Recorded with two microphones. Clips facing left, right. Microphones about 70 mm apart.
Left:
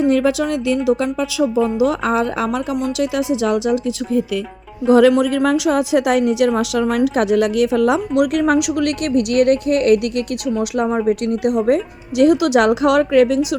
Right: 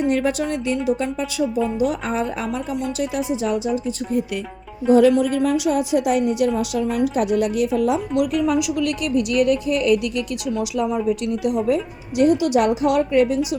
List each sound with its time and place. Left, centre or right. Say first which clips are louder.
0.1 s a woman's voice: left 4 dB; left
4.9 s a woman's voice: left 3 dB; left
8.1 s a woman's voice: left 4 dB; left
10.6 s speech: left 3 dB; left
12.1 s a woman's voice: left 4 dB; left